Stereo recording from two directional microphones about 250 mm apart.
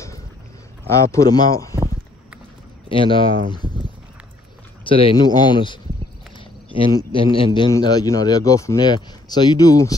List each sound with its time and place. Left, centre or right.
0.8 s speech: centre
2.9 s speech: centre
3.6 s a sound: centre
4.8 s speech: left
6.8 s speech: centre